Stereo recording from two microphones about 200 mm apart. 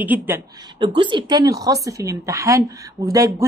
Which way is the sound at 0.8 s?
25° right (ahead or behind).